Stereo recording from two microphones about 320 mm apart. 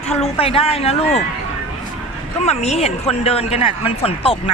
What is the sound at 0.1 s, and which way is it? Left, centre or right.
A woman's voice, centre.